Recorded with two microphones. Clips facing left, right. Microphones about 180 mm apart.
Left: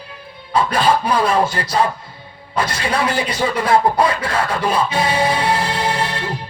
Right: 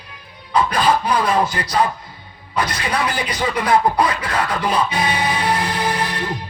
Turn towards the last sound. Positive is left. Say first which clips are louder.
# left 1 dB
turn(degrees=30)  # may be behind; listen again after turning